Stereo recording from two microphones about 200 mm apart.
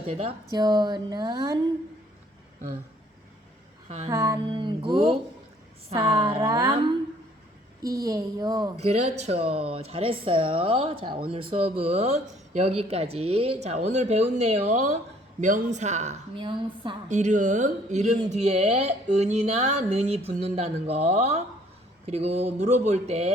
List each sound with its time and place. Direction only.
0.1 s speech: 30° right (ahead or behind)
3.8 s speech: 35° right (ahead or behind)
4.1 s music: 15° right (ahead or behind)
4.4 s speech: 25° right (ahead or behind)
6.4 s music: 15° right (ahead or behind)
7.8 s speech: 15° right (ahead or behind)
8.7 s speech: 35° right (ahead or behind)
17.1 s speech: 35° right (ahead or behind)